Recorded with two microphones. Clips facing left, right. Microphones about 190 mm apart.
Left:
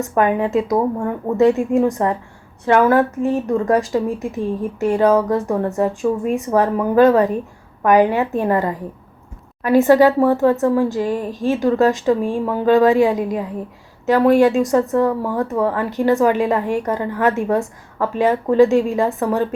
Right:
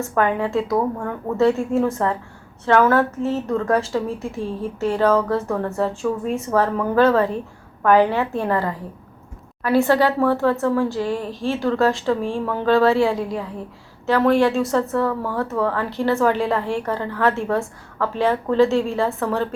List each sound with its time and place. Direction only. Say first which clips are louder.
0.0 s a woman's voice: left 3 dB; 15° left (ahead or behind)